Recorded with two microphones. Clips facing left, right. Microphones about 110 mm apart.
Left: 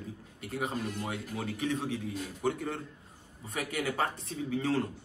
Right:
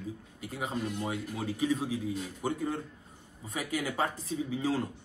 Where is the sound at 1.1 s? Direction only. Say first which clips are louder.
Right 1 dB; 20° right (ahead or behind).